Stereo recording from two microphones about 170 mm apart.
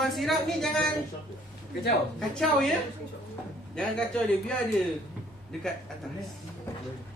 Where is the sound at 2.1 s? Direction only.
5° left (ahead or behind).